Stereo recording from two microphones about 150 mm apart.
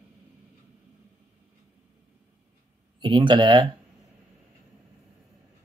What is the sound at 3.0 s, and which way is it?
Speech, 30° right (ahead or behind).